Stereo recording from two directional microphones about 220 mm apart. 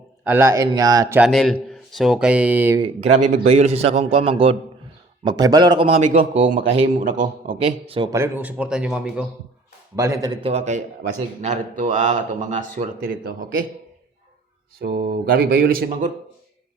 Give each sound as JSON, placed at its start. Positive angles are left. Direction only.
{"t": 0.3, "sound": "speech", "side_deg": -10}
{"t": 1.2, "sound": "speech", "side_deg": 0}
{"t": 3.2, "sound": "speech", "side_deg": -30}
{"t": 7.5, "sound": "speech", "side_deg": -20}
{"t": 10.5, "sound": "speech", "side_deg": -30}
{"t": 14.8, "sound": "speech", "side_deg": -45}